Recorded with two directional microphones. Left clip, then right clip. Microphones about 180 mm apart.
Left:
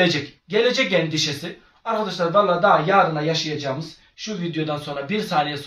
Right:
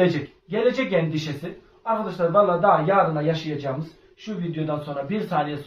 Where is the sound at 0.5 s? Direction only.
15° left (ahead or behind).